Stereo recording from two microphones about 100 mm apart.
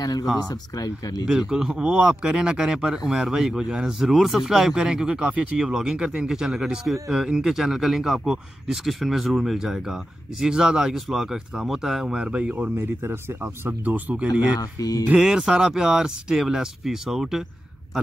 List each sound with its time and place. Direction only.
0.0 s speech: 40° left (ahead or behind)
1.5 s speech: 10° right (ahead or behind)
14.6 s speech: 40° left (ahead or behind)
15.0 s speech: 5° right (ahead or behind)